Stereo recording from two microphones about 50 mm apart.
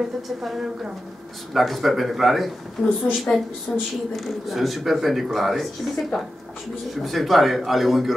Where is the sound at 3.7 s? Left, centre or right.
Left.